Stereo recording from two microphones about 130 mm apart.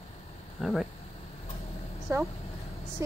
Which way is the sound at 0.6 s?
Centre (ahead or behind).